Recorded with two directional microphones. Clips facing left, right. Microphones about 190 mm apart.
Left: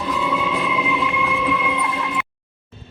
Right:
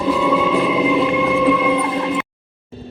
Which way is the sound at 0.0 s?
45° right (ahead or behind).